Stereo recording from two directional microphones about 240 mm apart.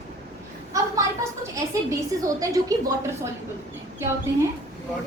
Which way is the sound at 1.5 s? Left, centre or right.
Centre.